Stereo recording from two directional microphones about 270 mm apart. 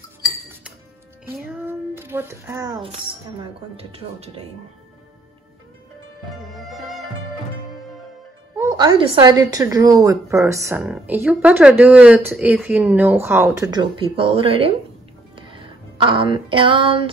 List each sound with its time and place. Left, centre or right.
1.7 s speech: centre
6.5 s music: centre
8.5 s speech: centre
15.3 s music: centre